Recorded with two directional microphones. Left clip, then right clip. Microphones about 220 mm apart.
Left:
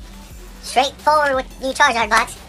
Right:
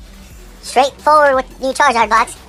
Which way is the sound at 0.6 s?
25° right (ahead or behind).